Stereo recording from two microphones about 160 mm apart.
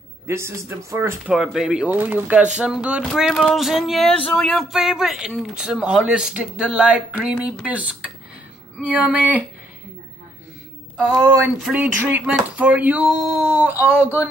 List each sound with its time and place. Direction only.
0.3 s speech: 15° right (ahead or behind)
1.3 s speech: 5° right (ahead or behind)
11.6 s speech: 10° right (ahead or behind)